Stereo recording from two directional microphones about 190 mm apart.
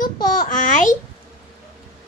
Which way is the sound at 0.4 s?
45° left (ahead or behind).